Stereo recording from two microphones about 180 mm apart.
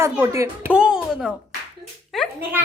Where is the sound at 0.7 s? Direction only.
5° right (ahead or behind).